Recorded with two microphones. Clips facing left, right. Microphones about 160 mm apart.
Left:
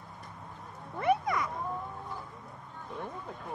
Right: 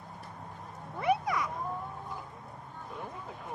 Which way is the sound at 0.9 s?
5° right (ahead or behind).